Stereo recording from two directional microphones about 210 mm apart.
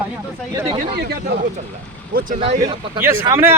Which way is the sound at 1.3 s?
55° right (ahead or behind).